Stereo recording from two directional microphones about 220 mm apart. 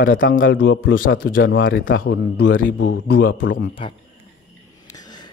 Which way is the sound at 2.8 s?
55° left (ahead or behind).